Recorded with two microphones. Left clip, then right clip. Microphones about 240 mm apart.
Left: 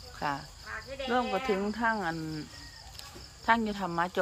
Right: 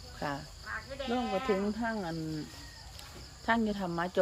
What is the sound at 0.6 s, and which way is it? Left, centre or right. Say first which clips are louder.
Speech: left 1 dB; left.